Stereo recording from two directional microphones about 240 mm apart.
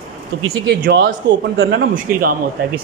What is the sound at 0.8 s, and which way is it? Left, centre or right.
A man's voice, right.